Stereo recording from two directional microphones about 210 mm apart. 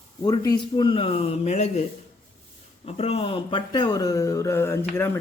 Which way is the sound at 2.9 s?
30° left (ahead or behind).